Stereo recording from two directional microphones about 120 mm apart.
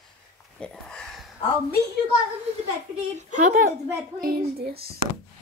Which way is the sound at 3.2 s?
90° right.